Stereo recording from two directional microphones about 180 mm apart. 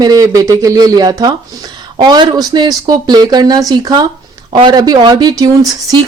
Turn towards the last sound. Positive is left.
turn(degrees=-20)  # may be behind; listen again after turning